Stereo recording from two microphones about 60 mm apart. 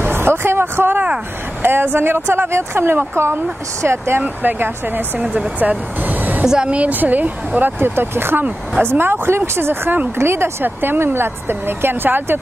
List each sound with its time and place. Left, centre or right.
0.0 s vehicle: right
1.6 s speech: right
4.2 s speech: right
5.6 s vehicle: right
6.4 s a woman's voice: centre
6.7 s speech: right